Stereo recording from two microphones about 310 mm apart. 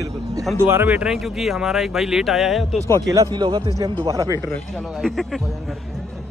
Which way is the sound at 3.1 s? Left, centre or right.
Centre.